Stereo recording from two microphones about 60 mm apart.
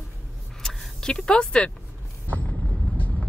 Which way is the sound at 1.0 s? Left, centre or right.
Centre.